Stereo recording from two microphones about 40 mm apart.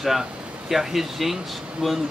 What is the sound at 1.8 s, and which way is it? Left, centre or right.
Speech, centre.